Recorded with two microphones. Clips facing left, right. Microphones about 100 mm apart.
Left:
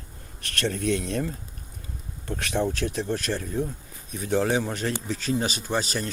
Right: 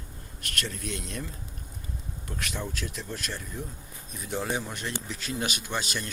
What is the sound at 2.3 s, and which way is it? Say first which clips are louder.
Speech: left 9 dB; 55° left (ahead or behind).